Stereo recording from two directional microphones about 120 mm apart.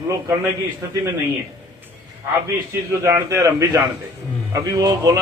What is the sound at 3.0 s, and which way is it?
Speech, 25° right (ahead or behind).